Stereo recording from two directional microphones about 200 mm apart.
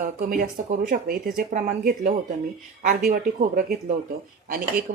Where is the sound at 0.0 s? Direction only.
40° right (ahead or behind).